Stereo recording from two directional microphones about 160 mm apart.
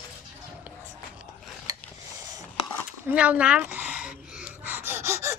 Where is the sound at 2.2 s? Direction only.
25° right (ahead or behind).